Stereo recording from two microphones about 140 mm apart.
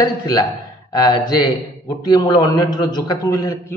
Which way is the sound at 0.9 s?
30° left (ahead or behind).